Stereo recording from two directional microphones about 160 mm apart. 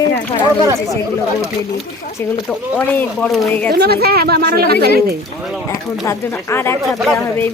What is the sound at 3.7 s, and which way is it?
Speech, 80° right.